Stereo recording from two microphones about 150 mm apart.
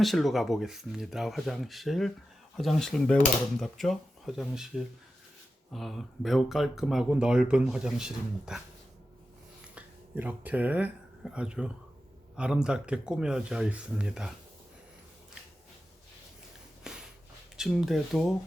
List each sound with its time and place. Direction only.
0.0 s speech: centre (ahead or behind)
5.7 s speech: centre (ahead or behind)
9.7 s speech: 10° right (ahead or behind)
16.9 s a sound: 5° right (ahead or behind)
17.6 s speech: centre (ahead or behind)